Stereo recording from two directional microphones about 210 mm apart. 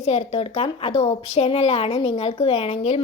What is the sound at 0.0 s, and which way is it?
A woman's voice, 30° left (ahead or behind).